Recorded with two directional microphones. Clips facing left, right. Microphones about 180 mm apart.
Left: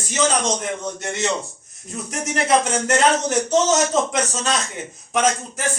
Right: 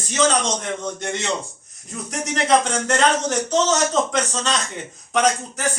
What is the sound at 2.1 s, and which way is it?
A man's voice, 5° left (ahead or behind).